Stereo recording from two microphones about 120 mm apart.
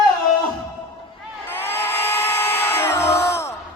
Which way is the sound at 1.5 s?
20° left (ahead or behind).